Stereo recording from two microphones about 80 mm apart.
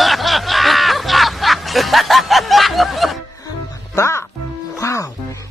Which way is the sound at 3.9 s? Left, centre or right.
Left.